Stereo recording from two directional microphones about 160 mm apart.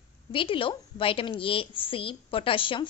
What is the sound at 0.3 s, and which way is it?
A woman's voice, 35° left (ahead or behind).